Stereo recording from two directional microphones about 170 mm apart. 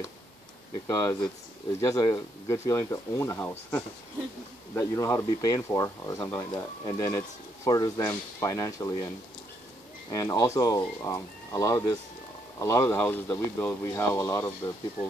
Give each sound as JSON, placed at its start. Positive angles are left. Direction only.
{"t": 0.8, "sound": "speech", "side_deg": 20}
{"t": 10.1, "sound": "speech", "side_deg": 20}